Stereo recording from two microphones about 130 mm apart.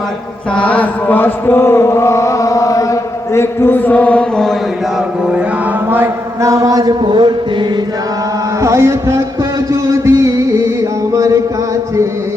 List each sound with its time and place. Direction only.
0.5 s mantra: 10° left (ahead or behind)
5.9 s a man's voice: 20° right (ahead or behind); by 7.3 s 35° right (ahead or behind)
8.6 s a man's voice: 20° right (ahead or behind)
9.8 s music: 20° right (ahead or behind)
11.1 s chant: 25° right (ahead or behind)